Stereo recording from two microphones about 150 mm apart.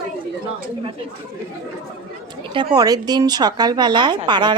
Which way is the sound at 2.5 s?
25° right (ahead or behind).